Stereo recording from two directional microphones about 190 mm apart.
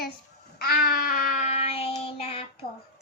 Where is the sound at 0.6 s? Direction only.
50° left (ahead or behind); by 2.5 s 30° left (ahead or behind).